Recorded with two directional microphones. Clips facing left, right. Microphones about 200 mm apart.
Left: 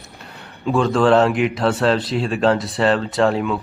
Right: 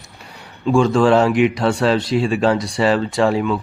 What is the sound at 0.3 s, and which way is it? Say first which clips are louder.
Speech: right 3 dB; centre (ahead or behind).